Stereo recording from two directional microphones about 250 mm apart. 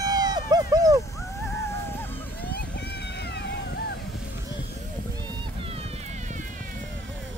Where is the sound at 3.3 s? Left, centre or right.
Left.